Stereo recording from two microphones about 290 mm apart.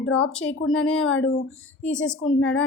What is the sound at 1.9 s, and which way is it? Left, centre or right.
Speech, centre.